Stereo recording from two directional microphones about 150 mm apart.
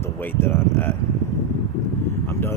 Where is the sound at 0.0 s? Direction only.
15° left (ahead or behind).